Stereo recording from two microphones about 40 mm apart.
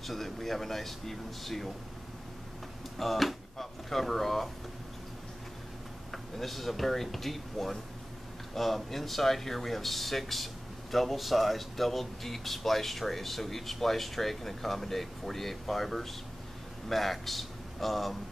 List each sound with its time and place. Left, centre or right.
0.0 s speech: centre
3.0 s speech: centre
6.1 s speech: centre